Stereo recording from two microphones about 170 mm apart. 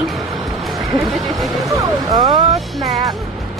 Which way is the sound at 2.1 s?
25° right (ahead or behind).